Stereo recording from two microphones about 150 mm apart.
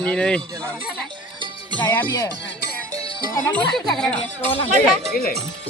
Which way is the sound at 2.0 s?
20° left (ahead or behind).